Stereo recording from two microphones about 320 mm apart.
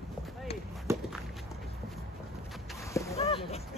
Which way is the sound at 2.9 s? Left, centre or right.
Centre.